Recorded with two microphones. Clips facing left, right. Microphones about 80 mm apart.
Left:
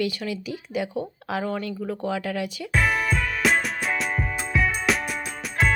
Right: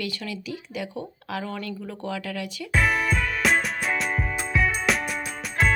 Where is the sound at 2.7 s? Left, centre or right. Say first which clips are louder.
Even; centre.